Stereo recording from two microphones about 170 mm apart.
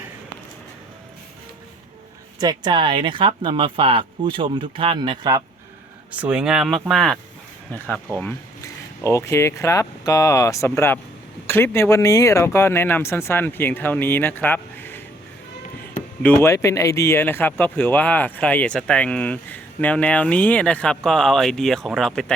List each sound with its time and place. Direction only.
2.4 s speech: 25° right (ahead or behind)
6.1 s speech: 5° right (ahead or behind); by 15.0 s 10° left (ahead or behind)
16.2 s speech: 15° left (ahead or behind)